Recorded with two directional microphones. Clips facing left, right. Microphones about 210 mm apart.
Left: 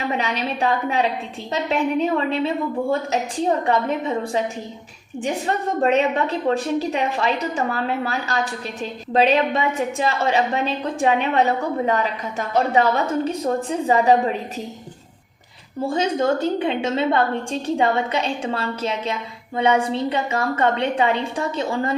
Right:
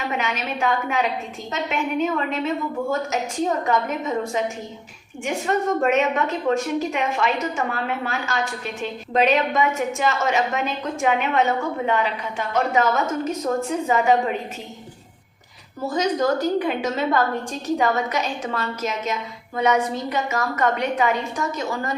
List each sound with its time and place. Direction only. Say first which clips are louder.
0.1 s a woman's voice: left 2 dB; 35° left (ahead or behind)
3.7 s a woman's voice: left 2 dB; 30° left (ahead or behind)
15.8 s a woman's voice: left 1 dB; 30° left (ahead or behind)